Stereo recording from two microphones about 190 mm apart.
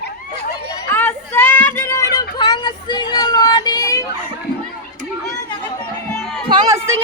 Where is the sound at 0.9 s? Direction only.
10° left (ahead or behind).